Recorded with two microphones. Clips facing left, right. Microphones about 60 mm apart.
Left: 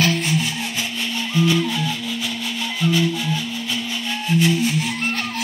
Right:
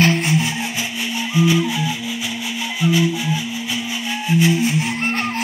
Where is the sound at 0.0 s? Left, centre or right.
Right.